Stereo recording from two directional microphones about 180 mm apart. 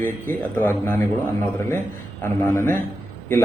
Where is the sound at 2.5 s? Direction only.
15° left (ahead or behind).